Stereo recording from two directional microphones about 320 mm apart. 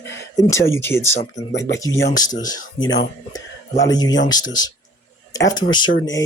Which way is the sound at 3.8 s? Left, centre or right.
Centre.